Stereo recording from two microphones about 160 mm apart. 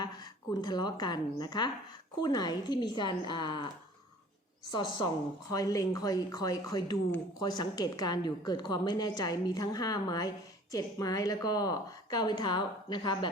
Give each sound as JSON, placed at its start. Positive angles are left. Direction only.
{"t": 0.6, "sound": "a woman's voice", "side_deg": 25}
{"t": 4.7, "sound": "a woman's voice", "side_deg": 25}